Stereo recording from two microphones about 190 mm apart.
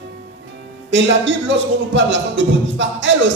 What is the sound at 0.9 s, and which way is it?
A man's voice, 70° right (ahead or behind).